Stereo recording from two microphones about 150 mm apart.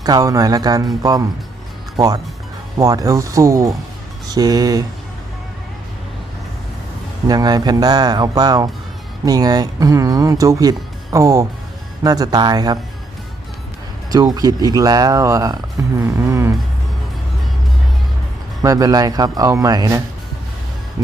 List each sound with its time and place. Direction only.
0.0 s speech: 25° right (ahead or behind)
2.0 s speech: centre (ahead or behind)
2.7 s speech: 20° right (ahead or behind)
7.3 s speech: 25° right (ahead or behind)
14.1 s speech: 25° right (ahead or behind)
18.6 s speech: 25° right (ahead or behind)